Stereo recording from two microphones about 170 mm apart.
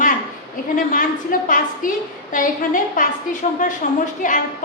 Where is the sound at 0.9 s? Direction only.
55° left (ahead or behind).